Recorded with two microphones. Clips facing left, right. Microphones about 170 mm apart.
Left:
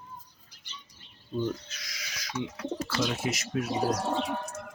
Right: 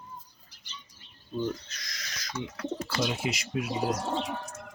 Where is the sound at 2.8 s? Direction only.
15° right (ahead or behind).